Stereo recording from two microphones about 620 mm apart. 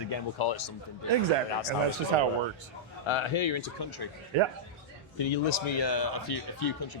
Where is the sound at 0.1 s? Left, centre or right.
Left.